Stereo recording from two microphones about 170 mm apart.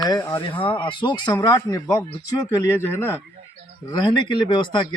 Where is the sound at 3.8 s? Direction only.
25° left (ahead or behind).